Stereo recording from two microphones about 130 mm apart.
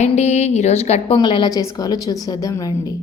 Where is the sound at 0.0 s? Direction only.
60° left (ahead or behind).